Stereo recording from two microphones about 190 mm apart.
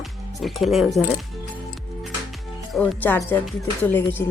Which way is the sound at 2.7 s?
10° left (ahead or behind).